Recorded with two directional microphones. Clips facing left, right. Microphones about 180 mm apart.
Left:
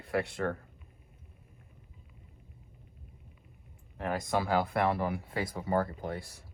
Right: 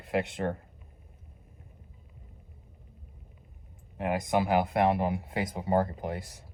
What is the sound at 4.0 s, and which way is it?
Speech, 20° right (ahead or behind).